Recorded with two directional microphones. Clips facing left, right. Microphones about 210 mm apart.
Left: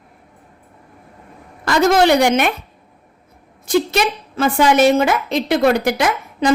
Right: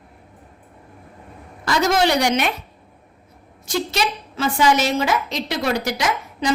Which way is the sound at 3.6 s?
55° left (ahead or behind).